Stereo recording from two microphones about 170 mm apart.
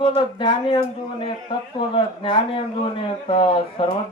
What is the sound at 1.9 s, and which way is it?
A man's voice, 30° left (ahead or behind).